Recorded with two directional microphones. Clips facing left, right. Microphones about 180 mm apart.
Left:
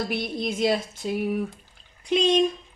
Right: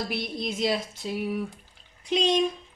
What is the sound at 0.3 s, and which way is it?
Speech, 55° left (ahead or behind).